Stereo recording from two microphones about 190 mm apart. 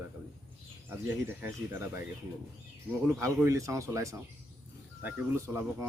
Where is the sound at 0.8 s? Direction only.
10° right (ahead or behind).